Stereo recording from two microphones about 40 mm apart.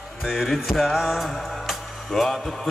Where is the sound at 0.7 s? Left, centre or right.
Centre.